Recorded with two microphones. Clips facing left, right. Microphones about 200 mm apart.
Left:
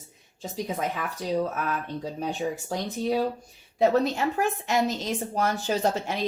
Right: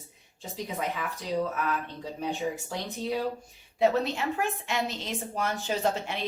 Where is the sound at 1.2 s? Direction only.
40° left (ahead or behind).